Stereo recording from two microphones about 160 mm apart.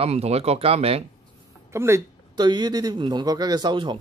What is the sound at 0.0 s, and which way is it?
Speech, 40° right (ahead or behind).